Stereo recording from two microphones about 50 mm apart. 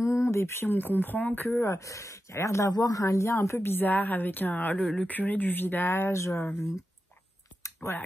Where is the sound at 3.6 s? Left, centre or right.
Left.